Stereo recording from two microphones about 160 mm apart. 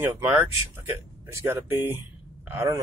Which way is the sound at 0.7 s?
15° right (ahead or behind).